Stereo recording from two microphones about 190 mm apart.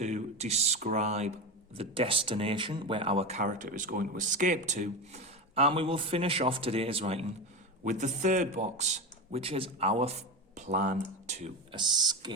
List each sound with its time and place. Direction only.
0.0 s speech: 35° right (ahead or behind)
11.7 s speech: 25° right (ahead or behind)